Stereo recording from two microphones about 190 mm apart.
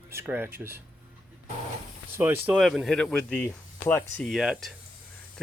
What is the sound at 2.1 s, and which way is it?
Speech, 10° right (ahead or behind).